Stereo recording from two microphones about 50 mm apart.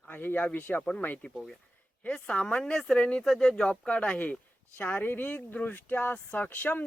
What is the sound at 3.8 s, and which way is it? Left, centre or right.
Speech, left.